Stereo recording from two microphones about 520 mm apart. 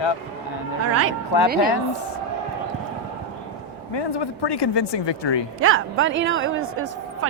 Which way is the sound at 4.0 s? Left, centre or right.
Left.